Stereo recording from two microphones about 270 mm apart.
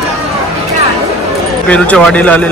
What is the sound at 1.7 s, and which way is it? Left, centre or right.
Speech, centre.